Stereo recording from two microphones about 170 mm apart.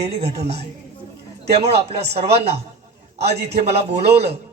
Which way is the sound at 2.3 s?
35° right (ahead or behind).